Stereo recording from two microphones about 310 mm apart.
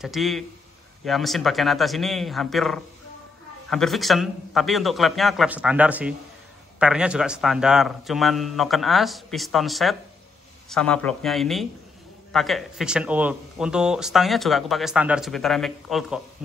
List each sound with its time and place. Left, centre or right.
0.0 s speech: centre